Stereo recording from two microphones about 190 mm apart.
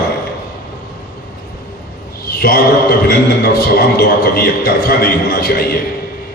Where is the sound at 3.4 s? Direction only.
55° left (ahead or behind).